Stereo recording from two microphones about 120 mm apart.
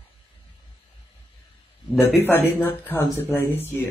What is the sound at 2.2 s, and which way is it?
Speech, 20° left (ahead or behind).